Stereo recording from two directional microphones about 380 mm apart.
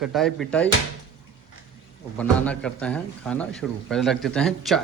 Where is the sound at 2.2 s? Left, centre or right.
Centre.